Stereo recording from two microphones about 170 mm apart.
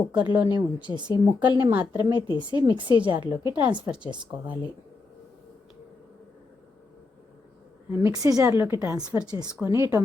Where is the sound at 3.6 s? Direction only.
10° right (ahead or behind).